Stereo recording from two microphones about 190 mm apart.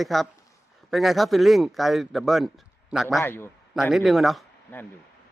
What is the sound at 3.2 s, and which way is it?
Speech, 10° left (ahead or behind).